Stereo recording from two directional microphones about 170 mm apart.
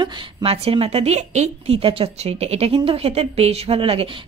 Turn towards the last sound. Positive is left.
turn(degrees=-35)  # may be behind; listen again after turning